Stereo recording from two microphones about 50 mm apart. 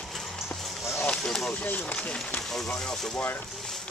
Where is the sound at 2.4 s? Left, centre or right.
Centre.